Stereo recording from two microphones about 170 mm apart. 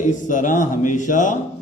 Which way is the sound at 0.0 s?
50° left (ahead or behind).